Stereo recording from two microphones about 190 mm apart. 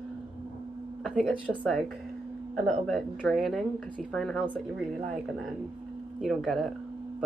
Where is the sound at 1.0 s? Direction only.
Centre (ahead or behind).